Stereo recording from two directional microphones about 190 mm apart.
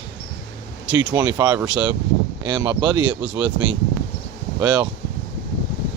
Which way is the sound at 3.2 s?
5° right (ahead or behind).